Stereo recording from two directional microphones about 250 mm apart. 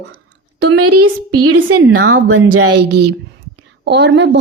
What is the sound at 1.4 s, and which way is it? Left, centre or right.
Speech, right.